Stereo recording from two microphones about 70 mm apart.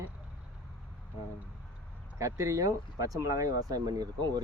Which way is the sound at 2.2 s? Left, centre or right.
Right.